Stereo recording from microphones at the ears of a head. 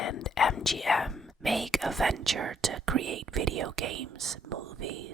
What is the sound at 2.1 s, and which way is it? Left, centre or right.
Whispering, right.